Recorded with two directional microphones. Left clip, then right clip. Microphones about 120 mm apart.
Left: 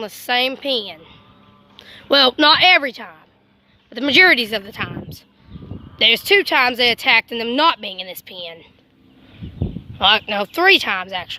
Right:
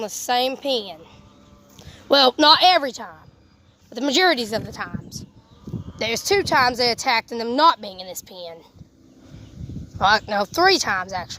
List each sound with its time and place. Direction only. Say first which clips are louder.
0.0 s a woman's voice: left 2 dB; 5° right (ahead or behind)
6.0 s speech: left 7 dB; 35° left (ahead or behind)
7.9 s a woman's voice: left 4 dB; centre (ahead or behind)
10.0 s speech: left 2 dB; 30° left (ahead or behind)